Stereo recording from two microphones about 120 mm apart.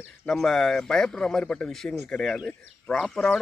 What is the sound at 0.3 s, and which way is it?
A man's voice, 5° left (ahead or behind).